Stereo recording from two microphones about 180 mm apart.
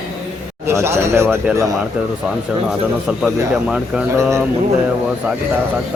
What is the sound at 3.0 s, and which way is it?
Speech, 5° right (ahead or behind).